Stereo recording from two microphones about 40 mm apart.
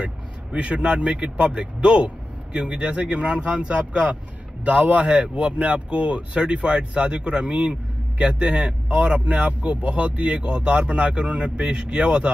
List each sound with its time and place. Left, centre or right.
0.0 s speech: right